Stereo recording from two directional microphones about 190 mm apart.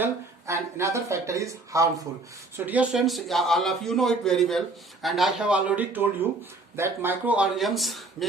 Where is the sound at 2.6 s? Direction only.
5° right (ahead or behind).